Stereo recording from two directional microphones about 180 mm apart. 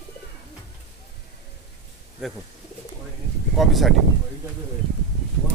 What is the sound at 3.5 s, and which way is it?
Speech, centre (ahead or behind).